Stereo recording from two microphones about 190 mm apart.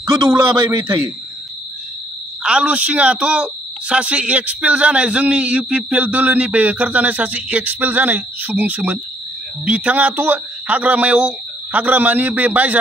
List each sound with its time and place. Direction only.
0.3 s a man's voice: 15° right (ahead or behind)
2.4 s a man's voice: 5° right (ahead or behind)